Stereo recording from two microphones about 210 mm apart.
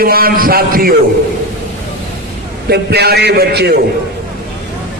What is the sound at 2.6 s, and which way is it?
A man's voice, 50° right (ahead or behind).